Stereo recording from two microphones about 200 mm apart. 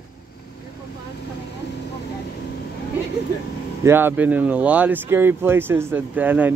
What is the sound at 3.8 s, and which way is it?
Speech, 10° right (ahead or behind).